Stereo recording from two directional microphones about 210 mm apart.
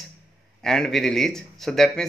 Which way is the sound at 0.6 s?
Centre (ahead or behind).